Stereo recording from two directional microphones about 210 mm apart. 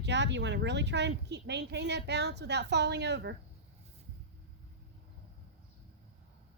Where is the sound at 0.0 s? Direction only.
55° right (ahead or behind).